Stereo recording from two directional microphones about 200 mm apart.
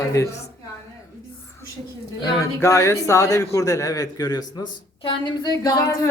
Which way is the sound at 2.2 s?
15° left (ahead or behind).